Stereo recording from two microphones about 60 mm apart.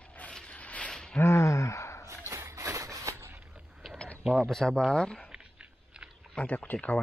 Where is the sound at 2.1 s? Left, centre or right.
Right.